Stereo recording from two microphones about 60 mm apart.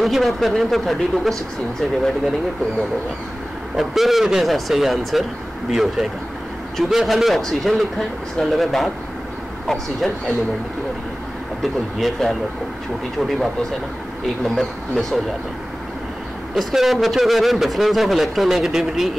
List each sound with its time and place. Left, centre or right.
0.0 s a man's voice: centre
3.7 s a man's voice: centre
11.6 s a man's voice: centre
14.4 s a man's voice: centre
16.5 s a man's voice: centre